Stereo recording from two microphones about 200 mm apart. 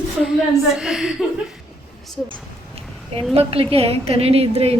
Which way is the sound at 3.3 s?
30° right (ahead or behind).